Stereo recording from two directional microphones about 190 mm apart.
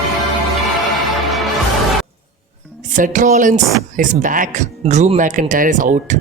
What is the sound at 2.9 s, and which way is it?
Speech, 40° right (ahead or behind).